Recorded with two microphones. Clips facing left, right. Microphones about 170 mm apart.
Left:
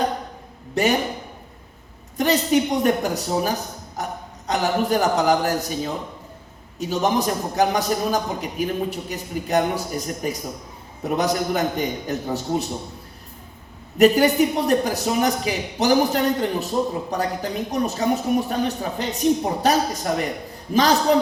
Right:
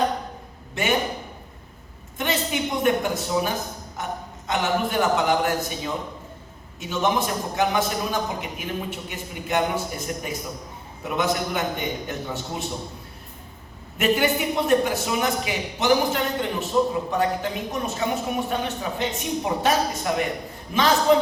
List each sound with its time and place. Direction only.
0.7 s a man's voice: 40° left (ahead or behind)
2.1 s a woman's voice: 40° left (ahead or behind)
14.0 s a man's voice: 40° left (ahead or behind)